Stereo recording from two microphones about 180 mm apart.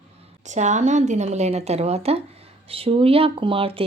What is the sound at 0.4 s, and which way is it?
Speech, 40° right (ahead or behind).